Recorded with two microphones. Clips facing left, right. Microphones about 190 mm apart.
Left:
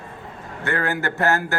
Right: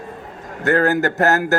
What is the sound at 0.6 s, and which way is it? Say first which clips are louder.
Speech: right 8 dB; 40° right (ahead or behind).